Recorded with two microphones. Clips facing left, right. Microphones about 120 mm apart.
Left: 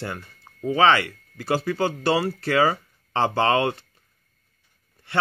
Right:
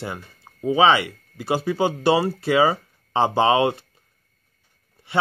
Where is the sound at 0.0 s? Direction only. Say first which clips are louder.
Right 1 dB; 15° right (ahead or behind).